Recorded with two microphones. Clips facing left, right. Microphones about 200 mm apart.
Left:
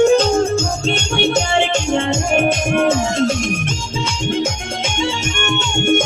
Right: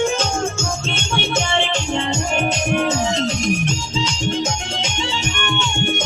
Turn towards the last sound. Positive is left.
turn(degrees=45)  # may be behind; listen again after turning